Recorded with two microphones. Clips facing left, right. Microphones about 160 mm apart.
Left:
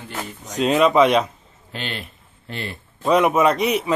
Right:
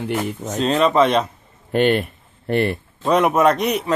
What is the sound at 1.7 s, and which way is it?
Speech, 55° right (ahead or behind).